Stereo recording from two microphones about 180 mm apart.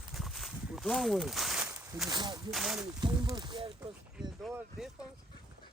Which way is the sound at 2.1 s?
25° right (ahead or behind).